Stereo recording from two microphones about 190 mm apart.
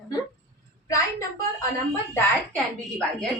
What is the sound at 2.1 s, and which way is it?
Speech, 5° left (ahead or behind).